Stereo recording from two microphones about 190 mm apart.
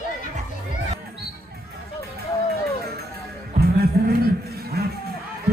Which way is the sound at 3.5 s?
55° right (ahead or behind).